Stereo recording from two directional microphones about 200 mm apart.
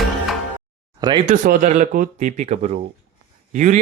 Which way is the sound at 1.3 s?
40° right (ahead or behind).